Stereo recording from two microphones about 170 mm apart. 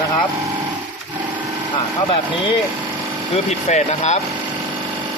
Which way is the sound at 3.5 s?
40° left (ahead or behind).